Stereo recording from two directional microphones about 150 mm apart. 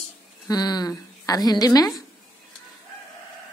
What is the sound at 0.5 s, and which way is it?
A woman's voice, 25° left (ahead or behind).